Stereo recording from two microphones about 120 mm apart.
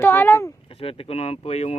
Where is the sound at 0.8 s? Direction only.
55° left (ahead or behind).